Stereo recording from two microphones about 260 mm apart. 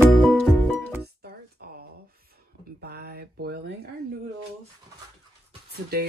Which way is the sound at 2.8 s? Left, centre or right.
Right.